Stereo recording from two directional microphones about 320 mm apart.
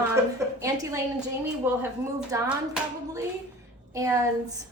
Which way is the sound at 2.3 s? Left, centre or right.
Centre.